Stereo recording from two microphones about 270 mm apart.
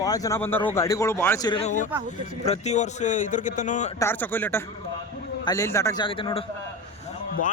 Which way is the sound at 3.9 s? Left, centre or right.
Centre.